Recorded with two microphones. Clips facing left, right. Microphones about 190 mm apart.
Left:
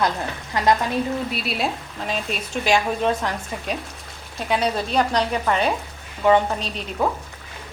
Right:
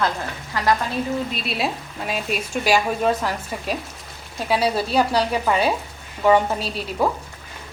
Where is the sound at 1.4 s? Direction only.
Centre (ahead or behind).